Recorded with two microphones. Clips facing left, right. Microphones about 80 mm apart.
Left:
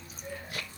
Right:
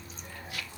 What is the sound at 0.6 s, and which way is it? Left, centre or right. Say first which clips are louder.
Music: even; left.